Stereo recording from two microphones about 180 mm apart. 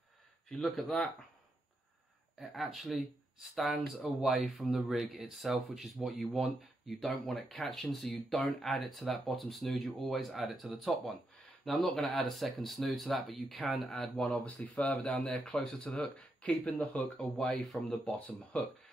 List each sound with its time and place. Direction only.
0.5 s speech: centre (ahead or behind)
2.5 s speech: centre (ahead or behind)